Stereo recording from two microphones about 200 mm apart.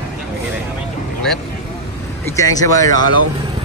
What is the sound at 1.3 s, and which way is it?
Speech, 5° left (ahead or behind).